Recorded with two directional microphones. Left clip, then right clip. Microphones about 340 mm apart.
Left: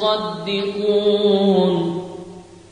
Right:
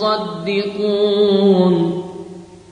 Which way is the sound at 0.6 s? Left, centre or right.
Centre.